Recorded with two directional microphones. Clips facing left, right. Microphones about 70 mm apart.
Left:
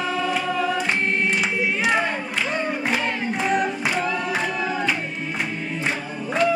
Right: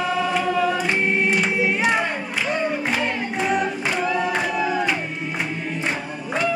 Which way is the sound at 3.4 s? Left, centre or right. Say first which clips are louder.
Right 1 dB; centre.